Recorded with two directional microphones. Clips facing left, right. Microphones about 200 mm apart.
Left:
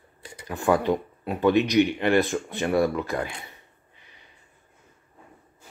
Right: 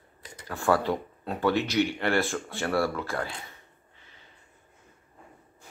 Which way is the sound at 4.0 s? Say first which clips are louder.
Left 1 dB; 15° left (ahead or behind).